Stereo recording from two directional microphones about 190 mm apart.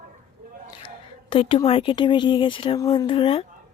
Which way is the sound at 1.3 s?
30° left (ahead or behind).